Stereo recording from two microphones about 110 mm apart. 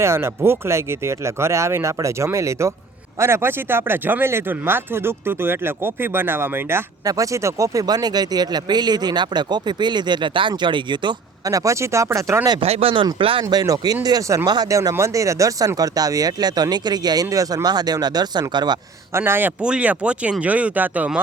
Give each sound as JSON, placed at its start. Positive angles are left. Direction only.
{"t": 0.0, "sound": "speech", "side_deg": -20}
{"t": 7.0, "sound": "speech", "side_deg": -30}
{"t": 11.4, "sound": "speech", "side_deg": -30}
{"t": 12.6, "sound": "speech", "side_deg": -65}
{"t": 13.5, "sound": "speech", "side_deg": -35}
{"t": 19.1, "sound": "speech", "side_deg": -20}